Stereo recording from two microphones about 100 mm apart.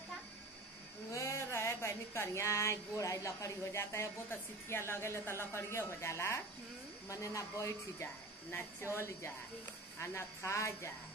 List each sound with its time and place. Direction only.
1.1 s speech: 30° left (ahead or behind)